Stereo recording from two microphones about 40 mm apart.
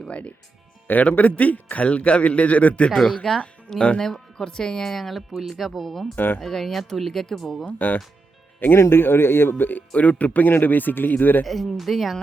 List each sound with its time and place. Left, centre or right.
0.1 s a man's voice: left
0.9 s a man's voice: left
3.2 s speech: centre
6.1 s speech: left
6.4 s speech: centre
7.6 s speech: left
8.7 s speech: left
9.9 s speech: left
11.4 s speech: centre